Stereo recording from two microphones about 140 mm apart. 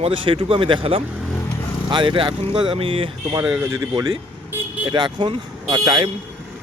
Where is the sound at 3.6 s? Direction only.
20° right (ahead or behind).